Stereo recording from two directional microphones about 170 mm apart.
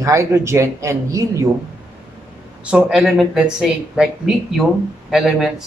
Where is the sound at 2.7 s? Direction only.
5° right (ahead or behind).